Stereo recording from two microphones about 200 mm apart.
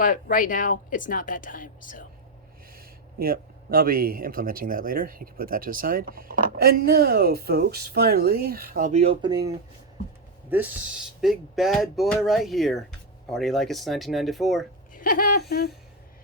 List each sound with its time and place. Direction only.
0.0 s speech: 40° left (ahead or behind)
2.7 s speech: 50° right (ahead or behind)
8.9 s speech: 30° right (ahead or behind)
10.5 s speech: 10° right (ahead or behind)
14.9 s a sound: 45° left (ahead or behind)